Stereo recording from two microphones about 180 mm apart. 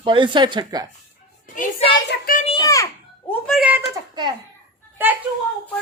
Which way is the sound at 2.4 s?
25° left (ahead or behind).